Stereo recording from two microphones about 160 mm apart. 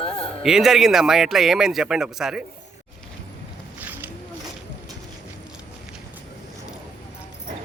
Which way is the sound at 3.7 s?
10° right (ahead or behind).